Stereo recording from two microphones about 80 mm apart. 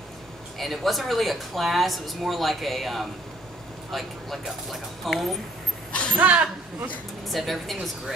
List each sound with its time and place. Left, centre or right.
0.6 s a woman's voice: centre
5.9 s a sound: centre
6.1 s speech: centre
7.2 s a woman's voice: centre